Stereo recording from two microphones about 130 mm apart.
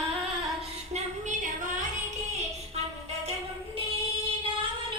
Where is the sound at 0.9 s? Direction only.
70° right (ahead or behind).